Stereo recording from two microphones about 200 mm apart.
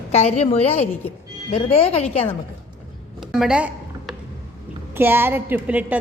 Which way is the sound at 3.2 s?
5° right (ahead or behind).